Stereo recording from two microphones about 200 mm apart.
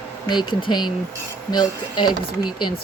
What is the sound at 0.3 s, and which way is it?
Speech, 20° left (ahead or behind).